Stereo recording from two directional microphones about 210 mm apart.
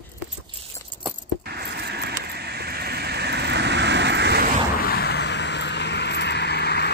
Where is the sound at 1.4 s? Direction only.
50° right (ahead or behind).